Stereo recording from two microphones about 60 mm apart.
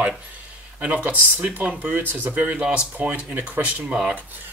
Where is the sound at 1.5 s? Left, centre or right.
Right.